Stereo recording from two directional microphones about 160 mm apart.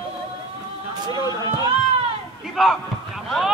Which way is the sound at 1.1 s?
25° left (ahead or behind).